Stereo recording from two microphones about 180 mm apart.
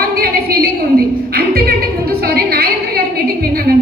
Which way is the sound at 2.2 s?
55° right (ahead or behind).